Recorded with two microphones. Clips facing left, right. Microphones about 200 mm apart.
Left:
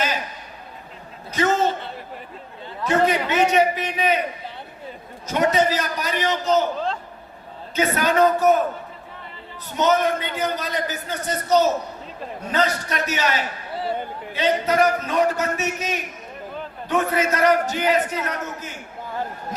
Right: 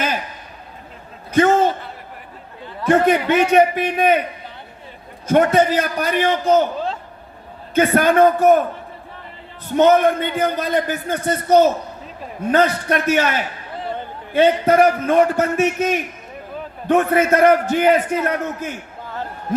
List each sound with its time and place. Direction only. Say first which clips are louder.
1.3 s a sound: right 7 dB; 55° right (ahead or behind)
2.8 s a man's voice: right 5 dB; 55° right (ahead or behind)
5.3 s a man's voice: right 5 dB; 55° right (ahead or behind)
7.8 s a man's voice: right 5 dB; 55° right (ahead or behind)
9.7 s a man's voice: right 6 dB; 55° right (ahead or behind)
13.8 s a man's voice: left 1 dB; 10° left (ahead or behind)
14.3 s a man's voice: right 6 dB; 55° right (ahead or behind)